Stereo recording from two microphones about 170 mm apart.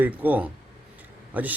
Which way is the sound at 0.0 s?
10° right (ahead or behind).